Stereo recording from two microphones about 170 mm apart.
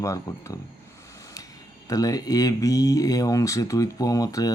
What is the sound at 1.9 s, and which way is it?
Speech, 20° left (ahead or behind).